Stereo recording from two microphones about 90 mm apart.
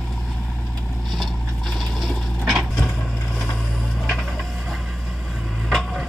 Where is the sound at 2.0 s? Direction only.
Centre (ahead or behind).